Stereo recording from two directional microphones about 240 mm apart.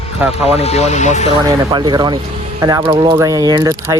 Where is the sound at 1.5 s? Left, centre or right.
Centre.